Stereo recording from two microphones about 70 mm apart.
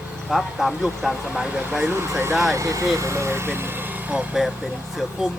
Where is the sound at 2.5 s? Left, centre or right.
Right.